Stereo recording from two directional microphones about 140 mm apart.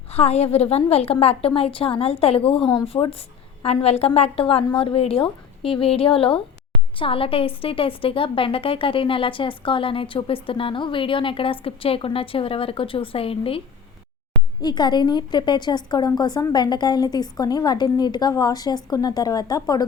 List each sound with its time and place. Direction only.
0.1 s a woman's voice: 50° left (ahead or behind)
14.6 s a woman's voice: 30° left (ahead or behind)